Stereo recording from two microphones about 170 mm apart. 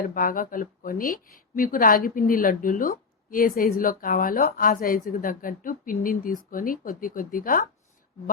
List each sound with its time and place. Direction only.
0.0 s speech: 55° left (ahead or behind)